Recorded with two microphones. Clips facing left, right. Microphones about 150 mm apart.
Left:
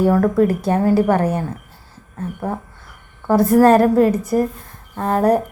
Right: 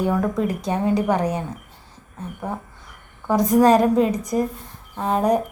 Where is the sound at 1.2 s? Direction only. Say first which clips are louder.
Left 4 dB; 15° right (ahead or behind).